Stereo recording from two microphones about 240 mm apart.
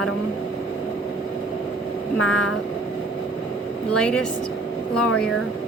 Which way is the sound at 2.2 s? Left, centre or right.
Left.